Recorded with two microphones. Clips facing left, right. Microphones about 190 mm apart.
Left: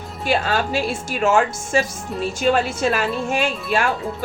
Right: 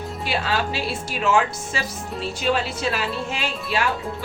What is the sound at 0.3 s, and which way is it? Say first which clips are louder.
Speech: left 5 dB; 45° left (ahead or behind).